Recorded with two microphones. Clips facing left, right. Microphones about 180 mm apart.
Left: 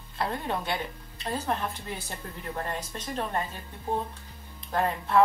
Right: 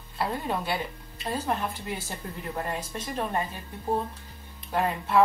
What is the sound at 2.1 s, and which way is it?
Speech, 10° right (ahead or behind).